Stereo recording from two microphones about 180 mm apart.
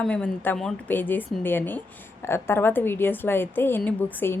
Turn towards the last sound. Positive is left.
turn(degrees=10)  # may be behind; listen again after turning